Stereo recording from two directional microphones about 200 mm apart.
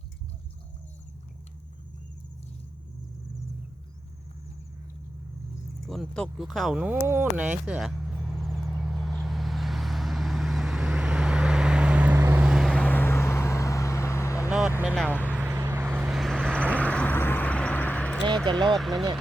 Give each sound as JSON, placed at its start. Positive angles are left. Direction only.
{"t": 5.9, "sound": "speech", "side_deg": 5}
{"t": 7.7, "sound": "vehicle", "side_deg": -5}
{"t": 14.8, "sound": "vehicle", "side_deg": -5}
{"t": 16.6, "sound": "vehicle", "side_deg": 5}
{"t": 18.5, "sound": "speech", "side_deg": -25}
{"t": 18.8, "sound": "speech", "side_deg": 0}